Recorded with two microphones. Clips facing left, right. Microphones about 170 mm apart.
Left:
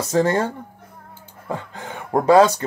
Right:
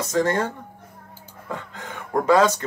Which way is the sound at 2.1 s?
30° left (ahead or behind).